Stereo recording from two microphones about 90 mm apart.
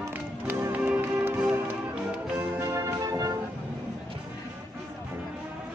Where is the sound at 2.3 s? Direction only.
30° right (ahead or behind).